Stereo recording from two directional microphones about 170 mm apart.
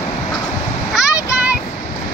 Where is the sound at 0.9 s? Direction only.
5° right (ahead or behind).